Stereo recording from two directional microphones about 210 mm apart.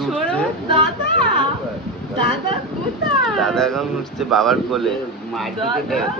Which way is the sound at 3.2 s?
Centre (ahead or behind).